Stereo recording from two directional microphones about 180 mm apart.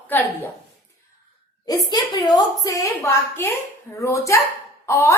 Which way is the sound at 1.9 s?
20° left (ahead or behind).